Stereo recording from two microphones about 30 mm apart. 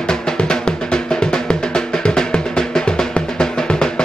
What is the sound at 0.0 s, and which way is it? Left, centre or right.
Music, left.